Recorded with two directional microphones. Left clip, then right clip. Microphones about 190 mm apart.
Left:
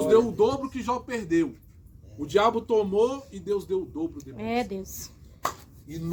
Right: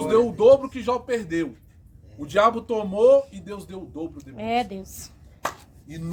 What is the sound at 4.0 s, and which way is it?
Speech, centre (ahead or behind).